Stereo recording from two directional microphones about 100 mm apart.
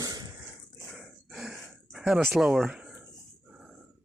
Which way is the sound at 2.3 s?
5° right (ahead or behind).